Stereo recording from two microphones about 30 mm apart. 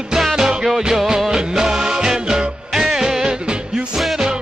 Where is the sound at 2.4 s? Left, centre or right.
Right.